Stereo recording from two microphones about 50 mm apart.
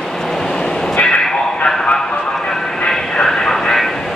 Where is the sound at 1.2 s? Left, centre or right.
Centre.